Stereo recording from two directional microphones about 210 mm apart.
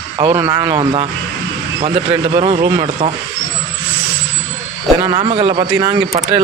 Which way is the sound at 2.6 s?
20° right (ahead or behind).